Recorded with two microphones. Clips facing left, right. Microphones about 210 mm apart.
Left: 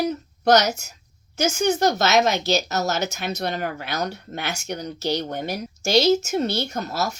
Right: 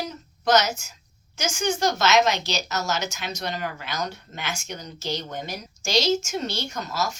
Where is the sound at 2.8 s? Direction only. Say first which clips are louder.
Left 4 dB; 55° left (ahead or behind).